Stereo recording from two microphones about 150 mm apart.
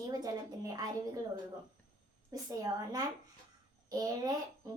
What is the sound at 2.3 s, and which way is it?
A woman's voice, 20° right (ahead or behind).